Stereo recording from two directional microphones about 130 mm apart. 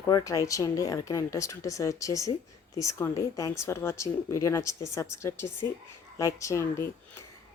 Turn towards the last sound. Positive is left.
turn(degrees=25)  # may be behind; listen again after turning